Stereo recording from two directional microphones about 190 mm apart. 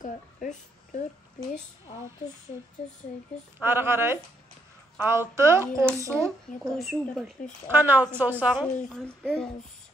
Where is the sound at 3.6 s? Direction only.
10° right (ahead or behind).